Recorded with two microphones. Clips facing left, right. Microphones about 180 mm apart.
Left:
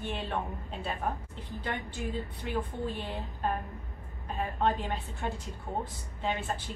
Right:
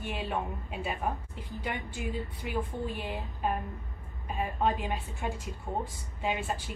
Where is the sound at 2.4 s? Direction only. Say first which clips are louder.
Even; 10° right (ahead or behind).